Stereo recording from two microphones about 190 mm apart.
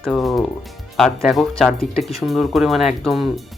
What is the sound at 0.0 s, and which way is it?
Speech, centre (ahead or behind).